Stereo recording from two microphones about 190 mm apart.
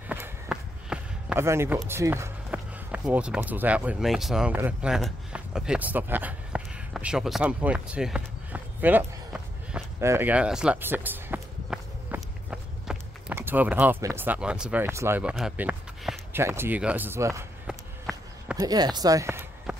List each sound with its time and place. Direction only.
0.1 s basketball bounce: 5° right (ahead or behind)
1.9 s speech: 15° right (ahead or behind)
17.6 s run: 5° right (ahead or behind)
18.6 s a sound: 20° right (ahead or behind)